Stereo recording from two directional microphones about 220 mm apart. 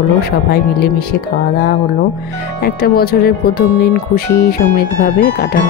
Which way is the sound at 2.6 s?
45° left (ahead or behind).